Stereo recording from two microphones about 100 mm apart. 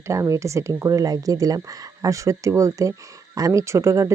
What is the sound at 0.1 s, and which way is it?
Speech, 30° right (ahead or behind).